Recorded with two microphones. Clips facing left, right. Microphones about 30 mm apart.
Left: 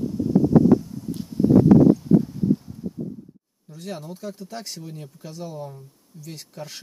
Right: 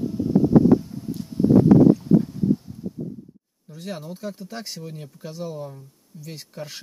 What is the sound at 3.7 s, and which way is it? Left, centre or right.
Speech, centre.